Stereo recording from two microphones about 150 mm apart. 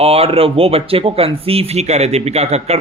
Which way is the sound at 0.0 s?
40° right (ahead or behind).